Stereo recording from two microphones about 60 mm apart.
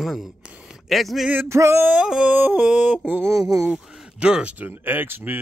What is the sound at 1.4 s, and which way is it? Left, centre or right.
Male singing, right.